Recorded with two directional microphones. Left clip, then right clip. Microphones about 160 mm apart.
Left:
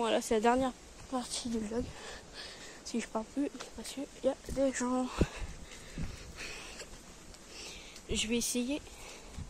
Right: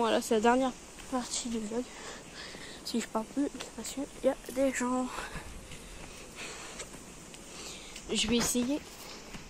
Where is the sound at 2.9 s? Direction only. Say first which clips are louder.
Right 3 dB; 20° left (ahead or behind); by 5.4 s 35° left (ahead or behind).